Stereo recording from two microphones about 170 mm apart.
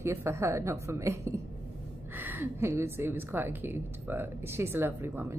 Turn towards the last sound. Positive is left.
turn(degrees=-15)  # may be behind; listen again after turning